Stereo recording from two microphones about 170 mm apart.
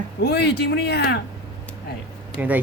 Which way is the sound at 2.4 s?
10° right (ahead or behind).